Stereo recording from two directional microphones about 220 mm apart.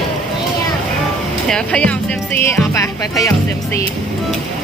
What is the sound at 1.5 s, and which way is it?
Speech, 5° left (ahead or behind).